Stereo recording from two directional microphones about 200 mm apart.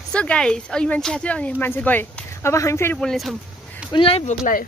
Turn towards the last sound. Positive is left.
turn(degrees=40)  # may be behind; listen again after turning